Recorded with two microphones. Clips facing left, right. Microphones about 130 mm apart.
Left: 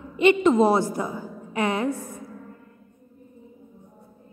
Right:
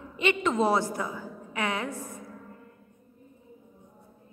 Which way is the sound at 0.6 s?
35° left (ahead or behind).